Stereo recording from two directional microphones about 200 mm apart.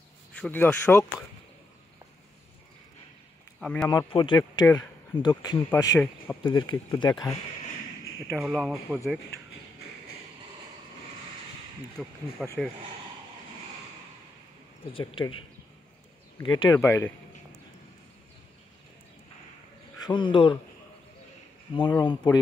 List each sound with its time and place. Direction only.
0.4 s speech: 10° left (ahead or behind)
3.5 s speech: 5° left (ahead or behind)
4.1 s speech: 20° left (ahead or behind)
8.4 s speech: centre (ahead or behind)
12.0 s speech: 5° left (ahead or behind)
14.9 s speech: 25° left (ahead or behind)
16.3 s speech: 20° left (ahead or behind)
20.0 s speech: 25° left (ahead or behind)
21.7 s speech: 20° left (ahead or behind)